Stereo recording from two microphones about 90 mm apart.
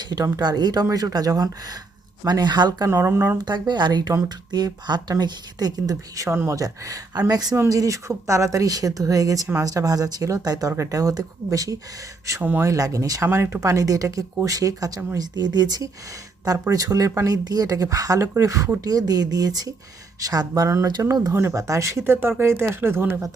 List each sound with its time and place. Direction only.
0.0 s speech: 50° right (ahead or behind)
2.9 s speech: 30° right (ahead or behind)
3.3 s speech: 55° right (ahead or behind)
7.5 s speech: 35° right (ahead or behind)
12.4 s speech: 20° right (ahead or behind)
12.6 s speech: 40° right (ahead or behind)
13.2 s speech: 25° right (ahead or behind); by 21.3 s 45° right (ahead or behind)
21.3 s speech: 35° right (ahead or behind)